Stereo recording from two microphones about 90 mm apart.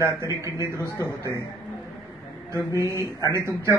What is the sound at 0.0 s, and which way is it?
Speech, 35° right (ahead or behind).